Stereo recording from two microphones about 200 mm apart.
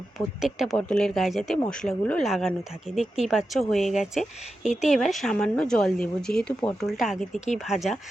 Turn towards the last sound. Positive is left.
turn(degrees=0)  # may be behind; listen again after turning